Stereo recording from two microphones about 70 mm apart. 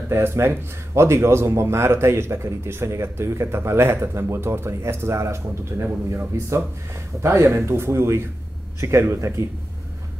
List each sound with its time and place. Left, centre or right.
0.1 s a man's voice: right